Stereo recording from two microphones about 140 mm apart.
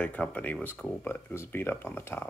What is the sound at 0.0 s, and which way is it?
Speech, 10° left (ahead or behind).